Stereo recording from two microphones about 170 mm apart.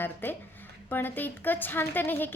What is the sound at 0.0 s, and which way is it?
A woman's voice, 10° left (ahead or behind).